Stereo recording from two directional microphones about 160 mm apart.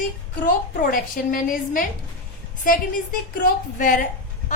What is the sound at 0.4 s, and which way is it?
A woman's voice, 60° left (ahead or behind).